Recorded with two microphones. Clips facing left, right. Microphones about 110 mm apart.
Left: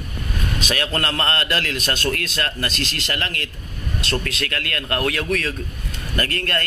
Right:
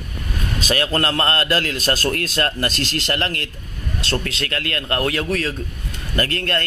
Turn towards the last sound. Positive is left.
turn(degrees=-25)  # may be behind; listen again after turning